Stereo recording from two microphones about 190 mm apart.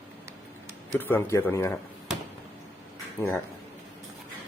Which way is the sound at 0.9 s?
10° left (ahead or behind).